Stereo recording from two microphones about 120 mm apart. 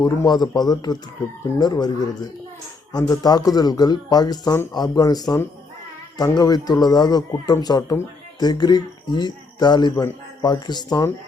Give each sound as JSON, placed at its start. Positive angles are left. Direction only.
{"t": 0.0, "sound": "speech", "side_deg": 35}